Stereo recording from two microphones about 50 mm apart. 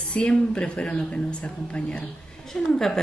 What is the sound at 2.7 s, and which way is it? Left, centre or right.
Speech, centre.